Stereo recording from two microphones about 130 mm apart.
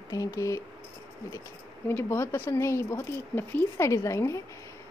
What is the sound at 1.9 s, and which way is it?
Speech, 20° left (ahead or behind).